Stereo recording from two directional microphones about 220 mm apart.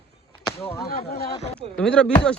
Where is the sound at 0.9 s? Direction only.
45° left (ahead or behind).